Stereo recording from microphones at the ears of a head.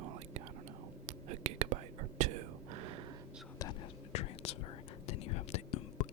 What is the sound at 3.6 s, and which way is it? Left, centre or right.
Whispering, left.